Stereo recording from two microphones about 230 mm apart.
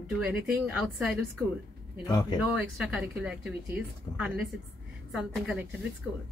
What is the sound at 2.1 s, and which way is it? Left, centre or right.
Speech, centre.